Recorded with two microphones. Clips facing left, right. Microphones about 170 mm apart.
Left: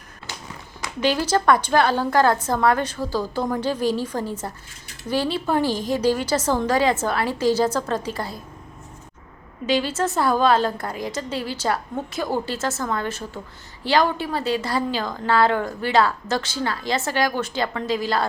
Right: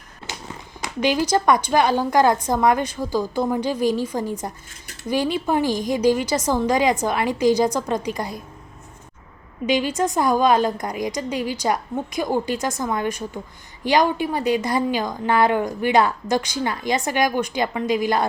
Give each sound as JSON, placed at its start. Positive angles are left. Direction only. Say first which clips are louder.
{"t": 0.8, "sound": "a woman's voice", "louder": "right 1 dB", "side_deg": -10}
{"t": 9.6, "sound": "a woman's voice", "louder": "right 1 dB", "side_deg": -15}